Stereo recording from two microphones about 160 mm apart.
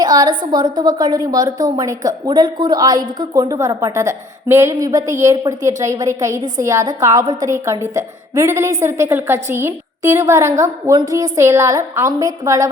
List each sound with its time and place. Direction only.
0.0 s a woman's voice: 25° right (ahead or behind)